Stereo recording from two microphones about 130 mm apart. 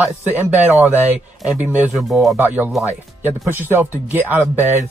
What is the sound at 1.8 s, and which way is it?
Speech, centre (ahead or behind).